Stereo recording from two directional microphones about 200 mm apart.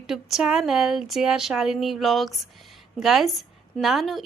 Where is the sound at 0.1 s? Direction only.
Centre (ahead or behind).